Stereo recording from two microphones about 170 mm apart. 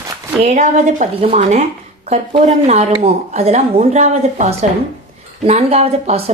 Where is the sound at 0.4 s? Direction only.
45° right (ahead or behind).